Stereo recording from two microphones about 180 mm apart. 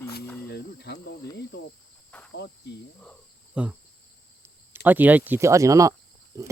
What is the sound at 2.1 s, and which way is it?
Cricket, 5° left (ahead or behind).